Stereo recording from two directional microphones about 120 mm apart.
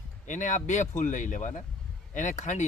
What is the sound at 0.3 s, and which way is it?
Speech, 90° left.